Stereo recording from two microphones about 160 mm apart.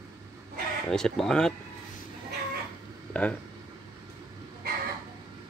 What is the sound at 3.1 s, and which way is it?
Speech, 5° left (ahead or behind).